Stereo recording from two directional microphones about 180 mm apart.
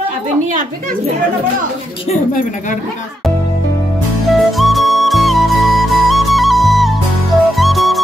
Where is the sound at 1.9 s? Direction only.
30° left (ahead or behind).